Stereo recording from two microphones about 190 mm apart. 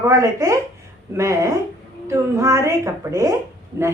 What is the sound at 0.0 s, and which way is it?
A woman's voice, 20° right (ahead or behind).